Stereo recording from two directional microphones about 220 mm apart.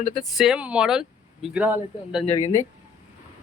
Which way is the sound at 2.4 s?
30° left (ahead or behind).